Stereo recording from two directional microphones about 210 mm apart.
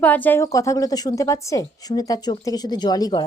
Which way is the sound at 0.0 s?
10° left (ahead or behind).